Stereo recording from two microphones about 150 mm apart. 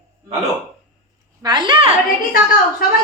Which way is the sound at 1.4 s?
30° right (ahead or behind).